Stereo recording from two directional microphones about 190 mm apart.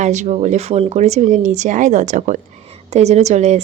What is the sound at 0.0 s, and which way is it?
A woman's voice, 40° right (ahead or behind).